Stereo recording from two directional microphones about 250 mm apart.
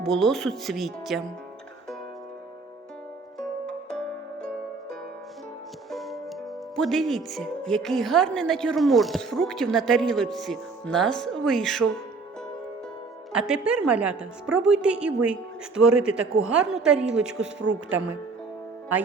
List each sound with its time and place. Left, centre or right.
0.0 s a woman's voice: centre
3.3 s music: centre
5.9 s music: centre
6.7 s a woman's voice: centre
13.3 s a woman's voice: centre